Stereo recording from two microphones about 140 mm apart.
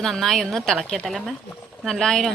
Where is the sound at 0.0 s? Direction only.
Centre (ahead or behind).